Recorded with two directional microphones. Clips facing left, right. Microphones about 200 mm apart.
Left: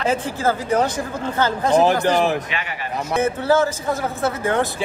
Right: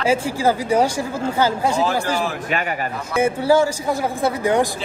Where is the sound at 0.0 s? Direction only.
10° right (ahead or behind).